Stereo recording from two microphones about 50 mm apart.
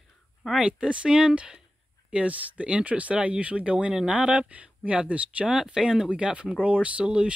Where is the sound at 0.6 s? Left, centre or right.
Right.